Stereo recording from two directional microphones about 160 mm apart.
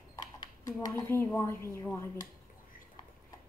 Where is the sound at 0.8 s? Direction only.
20° left (ahead or behind).